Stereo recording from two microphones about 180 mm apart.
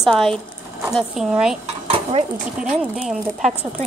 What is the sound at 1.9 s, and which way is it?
Speech, 35° right (ahead or behind).